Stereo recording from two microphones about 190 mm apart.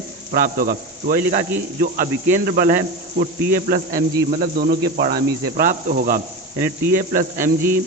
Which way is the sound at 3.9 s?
15° right (ahead or behind).